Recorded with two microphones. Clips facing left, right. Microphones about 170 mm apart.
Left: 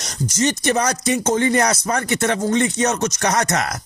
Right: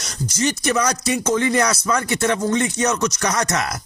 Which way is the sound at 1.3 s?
35° left (ahead or behind).